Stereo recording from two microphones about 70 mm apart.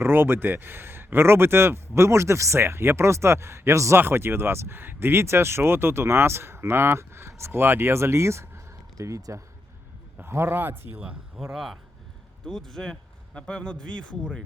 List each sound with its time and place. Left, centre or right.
0.0 s speech: right
10.2 s speech: right
11.5 s speech: centre